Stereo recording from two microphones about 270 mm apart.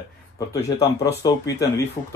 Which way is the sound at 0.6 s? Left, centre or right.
Centre.